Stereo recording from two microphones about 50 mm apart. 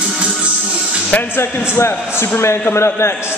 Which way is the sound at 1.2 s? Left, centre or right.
Left.